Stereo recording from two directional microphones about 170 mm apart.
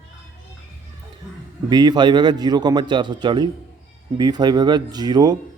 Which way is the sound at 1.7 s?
25° right (ahead or behind).